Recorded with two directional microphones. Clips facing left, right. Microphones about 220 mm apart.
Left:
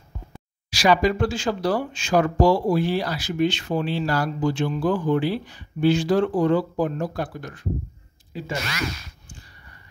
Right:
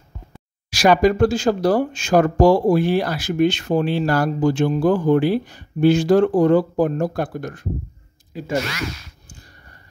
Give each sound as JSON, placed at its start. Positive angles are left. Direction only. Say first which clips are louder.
{"t": 0.7, "sound": "speech", "louder": "right 4 dB", "side_deg": -50}